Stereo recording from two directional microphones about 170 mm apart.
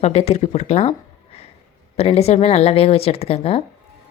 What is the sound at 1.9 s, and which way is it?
Speech, 35° left (ahead or behind).